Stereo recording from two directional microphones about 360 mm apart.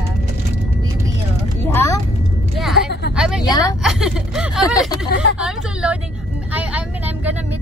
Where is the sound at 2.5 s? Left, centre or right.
Centre.